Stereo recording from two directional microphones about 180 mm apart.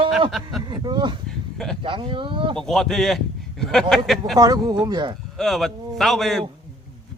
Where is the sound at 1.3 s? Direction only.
Centre (ahead or behind).